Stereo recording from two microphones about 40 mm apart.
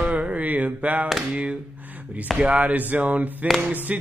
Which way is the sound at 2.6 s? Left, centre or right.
Right.